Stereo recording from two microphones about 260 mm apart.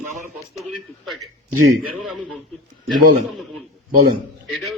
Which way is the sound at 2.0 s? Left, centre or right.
Centre.